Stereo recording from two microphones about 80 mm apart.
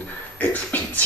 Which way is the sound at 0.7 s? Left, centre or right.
Left.